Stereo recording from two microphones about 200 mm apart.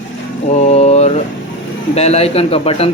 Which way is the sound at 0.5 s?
35° left (ahead or behind).